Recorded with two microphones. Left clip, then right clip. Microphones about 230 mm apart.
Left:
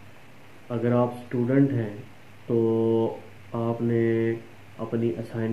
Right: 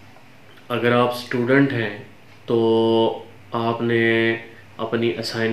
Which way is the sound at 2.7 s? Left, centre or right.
Right.